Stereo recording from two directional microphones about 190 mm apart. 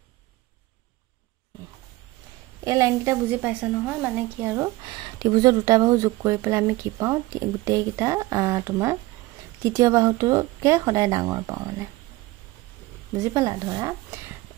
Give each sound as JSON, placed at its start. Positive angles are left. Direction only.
{"t": 2.6, "sound": "speech", "side_deg": -15}
{"t": 13.2, "sound": "speech", "side_deg": -20}